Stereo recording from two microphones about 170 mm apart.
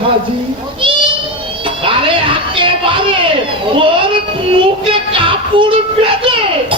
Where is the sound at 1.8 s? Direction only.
30° right (ahead or behind).